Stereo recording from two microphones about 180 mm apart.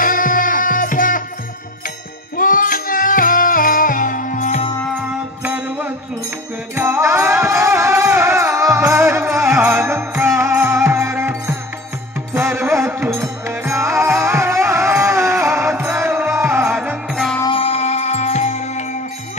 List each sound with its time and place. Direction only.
0.0 s music: 50° left (ahead or behind)
2.3 s music: 50° left (ahead or behind)
5.4 s music: 10° right (ahead or behind)
17.1 s music: centre (ahead or behind)
17.4 s music: 30° left (ahead or behind)